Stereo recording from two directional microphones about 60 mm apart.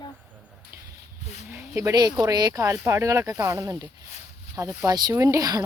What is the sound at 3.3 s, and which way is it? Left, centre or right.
Speech, right.